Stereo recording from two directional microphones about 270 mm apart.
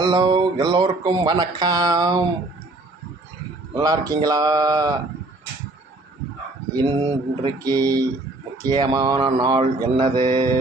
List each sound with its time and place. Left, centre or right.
0.0 s speech: centre
3.8 s speech: centre
6.7 s speech: centre